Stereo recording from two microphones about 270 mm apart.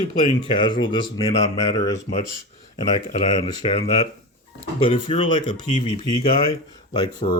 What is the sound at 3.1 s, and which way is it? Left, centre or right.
Speech, left.